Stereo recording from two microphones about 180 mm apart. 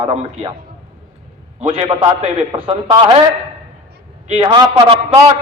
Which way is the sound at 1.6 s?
35° right (ahead or behind).